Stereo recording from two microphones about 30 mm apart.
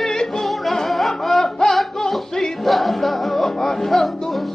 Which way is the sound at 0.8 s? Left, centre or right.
Centre.